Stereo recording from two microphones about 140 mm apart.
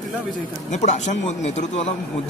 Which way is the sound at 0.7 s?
55° left (ahead or behind).